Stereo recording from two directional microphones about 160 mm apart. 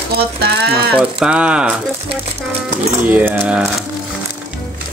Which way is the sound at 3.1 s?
10° right (ahead or behind).